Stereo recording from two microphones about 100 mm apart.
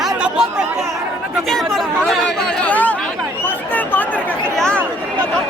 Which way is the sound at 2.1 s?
5° left (ahead or behind).